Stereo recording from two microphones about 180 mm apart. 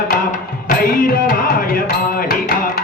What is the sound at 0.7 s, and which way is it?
Music, 45° left (ahead or behind).